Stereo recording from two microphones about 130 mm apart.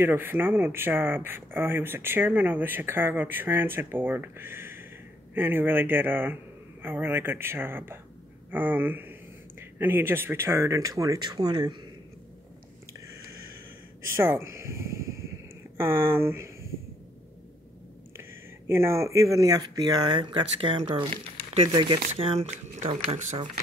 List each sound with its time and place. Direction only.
0.0 s speech: 15° right (ahead or behind); by 11.8 s 35° right (ahead or behind)
14.0 s speech: 20° right (ahead or behind)
18.7 s speech: 20° right (ahead or behind); by 23.5 s 60° right (ahead or behind)